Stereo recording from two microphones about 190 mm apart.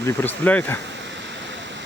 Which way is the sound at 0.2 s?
10° left (ahead or behind).